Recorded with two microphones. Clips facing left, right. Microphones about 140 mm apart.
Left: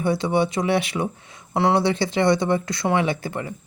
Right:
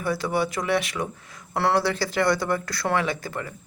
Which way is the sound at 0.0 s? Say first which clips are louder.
Left 4 dB; 25° left (ahead or behind).